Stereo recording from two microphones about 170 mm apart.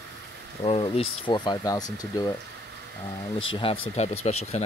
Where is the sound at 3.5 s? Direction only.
35° left (ahead or behind).